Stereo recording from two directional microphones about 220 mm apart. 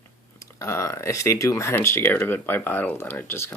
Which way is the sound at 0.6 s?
10° left (ahead or behind).